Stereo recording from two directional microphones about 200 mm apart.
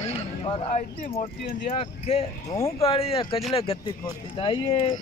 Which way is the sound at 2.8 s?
30° left (ahead or behind).